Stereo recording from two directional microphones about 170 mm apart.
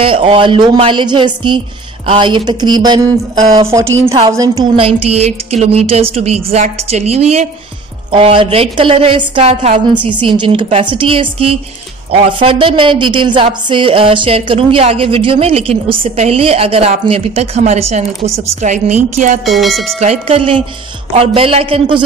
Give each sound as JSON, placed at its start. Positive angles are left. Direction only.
{"t": 0.0, "sound": "a woman's voice", "side_deg": -30}
{"t": 4.7, "sound": "a woman's voice", "side_deg": -35}
{"t": 10.1, "sound": "a woman's voice", "side_deg": -25}
{"t": 19.4, "sound": "speech", "side_deg": 0}
{"t": 20.0, "sound": "a woman's voice", "side_deg": -35}